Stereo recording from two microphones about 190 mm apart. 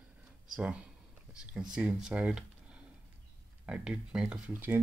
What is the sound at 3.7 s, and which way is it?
Speech, 5° right (ahead or behind).